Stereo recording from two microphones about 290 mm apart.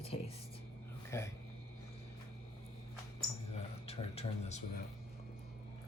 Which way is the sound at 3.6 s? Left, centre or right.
Left.